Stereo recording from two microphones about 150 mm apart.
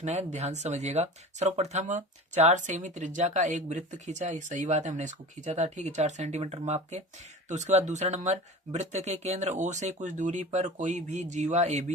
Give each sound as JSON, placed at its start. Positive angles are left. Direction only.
{"t": 0.0, "sound": "speech", "side_deg": -50}